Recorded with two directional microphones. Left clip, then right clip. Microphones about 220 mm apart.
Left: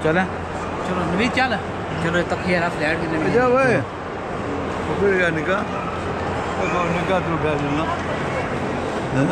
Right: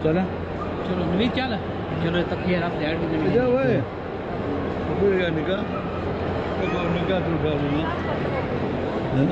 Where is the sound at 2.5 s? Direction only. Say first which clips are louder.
Left 6 dB; 20° left (ahead or behind).